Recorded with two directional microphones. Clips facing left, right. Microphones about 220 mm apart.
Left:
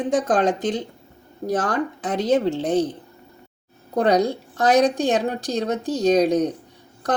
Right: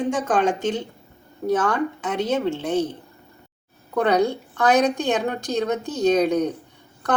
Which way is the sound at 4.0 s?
35° left (ahead or behind).